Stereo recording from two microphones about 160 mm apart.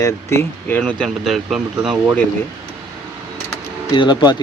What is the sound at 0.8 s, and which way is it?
Speech, 5° left (ahead or behind).